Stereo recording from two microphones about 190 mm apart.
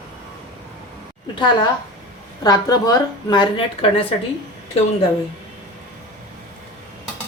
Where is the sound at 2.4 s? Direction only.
20° left (ahead or behind).